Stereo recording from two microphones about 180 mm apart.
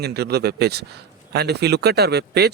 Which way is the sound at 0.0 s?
65° right (ahead or behind).